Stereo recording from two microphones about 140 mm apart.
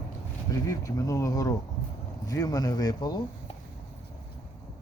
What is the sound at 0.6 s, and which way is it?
Speech, 25° left (ahead or behind).